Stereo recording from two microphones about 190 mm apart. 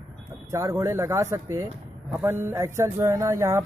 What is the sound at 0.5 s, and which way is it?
Speech, 15° right (ahead or behind).